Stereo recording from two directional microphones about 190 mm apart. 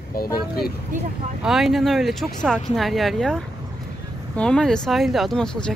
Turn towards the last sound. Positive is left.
turn(degrees=5)  # may be behind; listen again after turning